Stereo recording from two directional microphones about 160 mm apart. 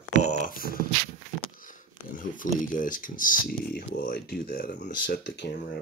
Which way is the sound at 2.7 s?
55° left (ahead or behind).